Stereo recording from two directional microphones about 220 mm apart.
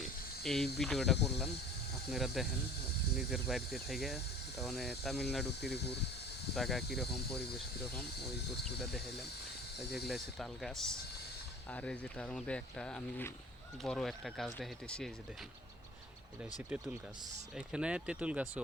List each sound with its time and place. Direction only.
0.0 s a sound: centre (ahead or behind)
0.8 s speech: centre (ahead or behind)
6.6 s speech: centre (ahead or behind)
10.1 s speech: centre (ahead or behind)
16.4 s speech: 5° right (ahead or behind)